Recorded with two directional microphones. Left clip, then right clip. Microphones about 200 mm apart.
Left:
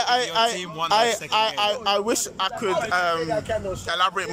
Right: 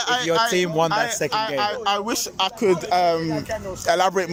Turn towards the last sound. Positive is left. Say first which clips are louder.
# right 4 dB
turn(degrees=-35)  # may be behind; listen again after turning